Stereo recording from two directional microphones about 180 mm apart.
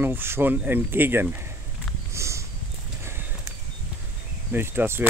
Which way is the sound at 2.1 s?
15° right (ahead or behind).